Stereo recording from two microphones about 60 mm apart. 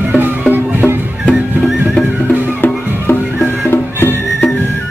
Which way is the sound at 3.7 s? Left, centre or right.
Left.